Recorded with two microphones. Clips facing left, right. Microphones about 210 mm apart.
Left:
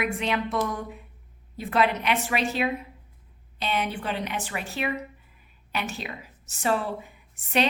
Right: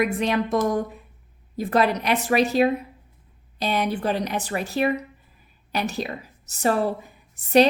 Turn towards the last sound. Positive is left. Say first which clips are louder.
# right 9 dB
turn(degrees=-40)  # may be behind; listen again after turning